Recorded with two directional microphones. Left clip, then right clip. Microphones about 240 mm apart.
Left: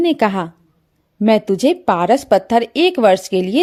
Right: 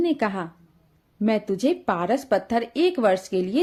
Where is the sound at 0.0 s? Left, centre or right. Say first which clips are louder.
Left 8 dB; left.